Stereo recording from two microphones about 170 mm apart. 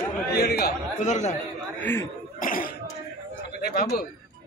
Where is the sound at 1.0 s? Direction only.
40° left (ahead or behind).